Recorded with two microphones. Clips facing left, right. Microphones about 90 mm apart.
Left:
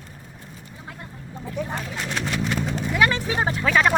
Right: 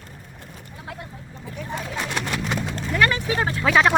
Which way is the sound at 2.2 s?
Centre (ahead or behind).